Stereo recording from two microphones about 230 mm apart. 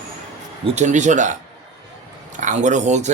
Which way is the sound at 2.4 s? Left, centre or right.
Right.